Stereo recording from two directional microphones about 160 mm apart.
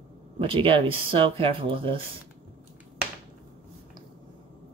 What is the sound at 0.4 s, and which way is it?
Speech, 35° right (ahead or behind).